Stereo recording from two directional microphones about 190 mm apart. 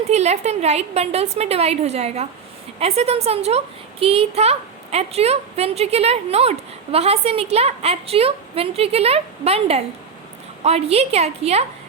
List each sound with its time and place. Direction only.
0.1 s a child's voice: 35° right (ahead or behind)